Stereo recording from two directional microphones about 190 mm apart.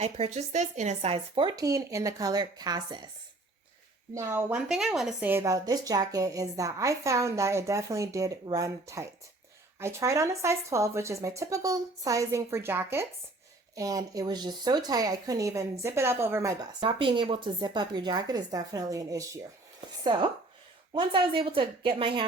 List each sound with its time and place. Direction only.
0.0 s speech: 35° right (ahead or behind)
4.1 s a woman's voice: 15° right (ahead or behind)